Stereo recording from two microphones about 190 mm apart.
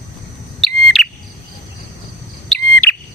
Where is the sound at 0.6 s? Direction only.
Centre (ahead or behind).